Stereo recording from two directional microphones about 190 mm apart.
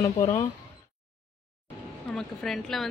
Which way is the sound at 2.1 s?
Centre (ahead or behind).